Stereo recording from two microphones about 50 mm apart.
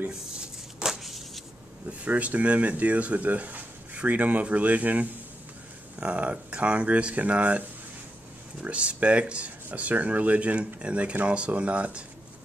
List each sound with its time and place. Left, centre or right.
0.4 s a sound: centre
1.9 s speech: right
8.6 s speech: right